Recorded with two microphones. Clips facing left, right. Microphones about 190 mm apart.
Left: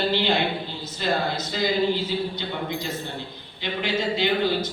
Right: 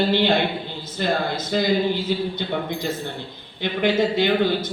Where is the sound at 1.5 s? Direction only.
55° right (ahead or behind).